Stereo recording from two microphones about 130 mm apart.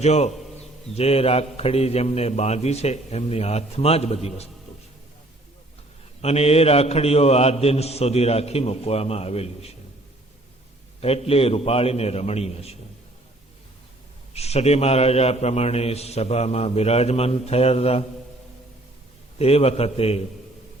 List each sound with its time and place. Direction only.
0.0 s a man's voice: 55° left (ahead or behind)
6.2 s a man's voice: 55° left (ahead or behind)
11.0 s a man's voice: 50° left (ahead or behind)
14.3 s a man's voice: 55° left (ahead or behind)
19.4 s a man's voice: 50° left (ahead or behind)